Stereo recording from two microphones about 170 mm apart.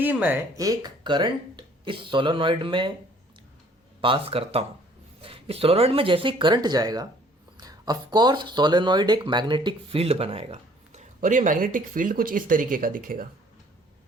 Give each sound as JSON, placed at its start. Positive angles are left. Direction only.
{"t": 0.0, "sound": "speech", "side_deg": -10}
{"t": 4.0, "sound": "speech", "side_deg": -30}